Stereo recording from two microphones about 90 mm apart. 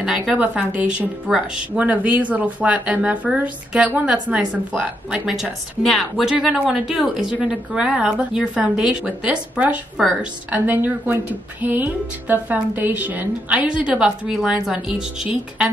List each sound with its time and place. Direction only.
0.3 s speech: 15° right (ahead or behind)
10.0 s a woman's voice: centre (ahead or behind)
10.5 s speech: 20° right (ahead or behind)